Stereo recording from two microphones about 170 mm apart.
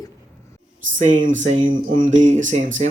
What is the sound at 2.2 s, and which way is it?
Speech, 45° right (ahead or behind).